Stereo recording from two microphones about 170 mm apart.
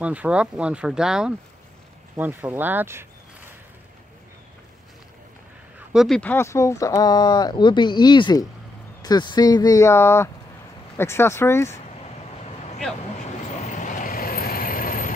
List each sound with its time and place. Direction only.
0.0 s speech: 10° right (ahead or behind)
5.9 s speech: 5° left (ahead or behind)
13.7 s vehicle: 45° left (ahead or behind)